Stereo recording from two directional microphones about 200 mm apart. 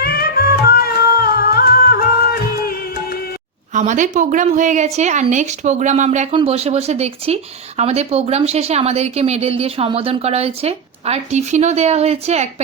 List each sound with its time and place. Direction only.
0.0 s music: 50° left (ahead or behind)
3.7 s speech: 40° right (ahead or behind)